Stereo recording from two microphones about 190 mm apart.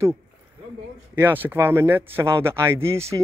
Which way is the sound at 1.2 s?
10° right (ahead or behind).